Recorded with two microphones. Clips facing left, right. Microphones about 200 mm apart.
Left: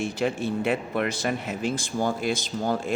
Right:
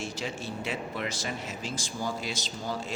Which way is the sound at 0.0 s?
55° left (ahead or behind).